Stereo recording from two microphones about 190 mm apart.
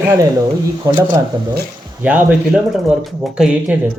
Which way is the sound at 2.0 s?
10° right (ahead or behind).